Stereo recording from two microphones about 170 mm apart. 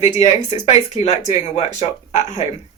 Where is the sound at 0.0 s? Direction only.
40° left (ahead or behind).